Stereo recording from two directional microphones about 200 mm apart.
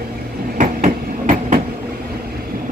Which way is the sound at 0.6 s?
40° right (ahead or behind).